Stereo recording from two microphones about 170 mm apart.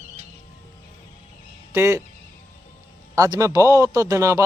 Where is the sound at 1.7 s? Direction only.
15° right (ahead or behind).